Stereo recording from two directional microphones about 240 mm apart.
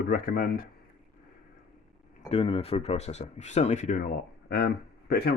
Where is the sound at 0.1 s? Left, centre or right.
Left.